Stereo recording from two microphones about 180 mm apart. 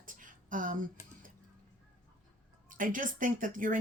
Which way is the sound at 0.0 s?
50° right (ahead or behind).